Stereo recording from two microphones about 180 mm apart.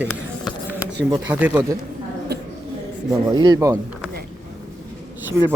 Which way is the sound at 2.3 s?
65° right (ahead or behind).